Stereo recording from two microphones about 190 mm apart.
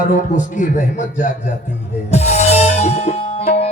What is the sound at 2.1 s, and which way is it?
Music, 35° left (ahead or behind).